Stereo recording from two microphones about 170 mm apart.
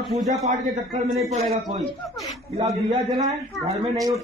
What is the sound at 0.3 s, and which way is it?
Speech, 40° right (ahead or behind).